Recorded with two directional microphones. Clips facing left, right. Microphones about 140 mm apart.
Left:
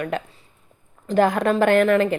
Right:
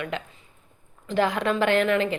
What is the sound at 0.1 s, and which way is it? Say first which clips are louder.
A woman's voice: left 5 dB; 45° left (ahead or behind).